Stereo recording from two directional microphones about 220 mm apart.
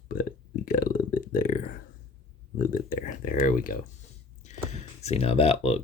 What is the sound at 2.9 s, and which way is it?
Speech, 40° left (ahead or behind).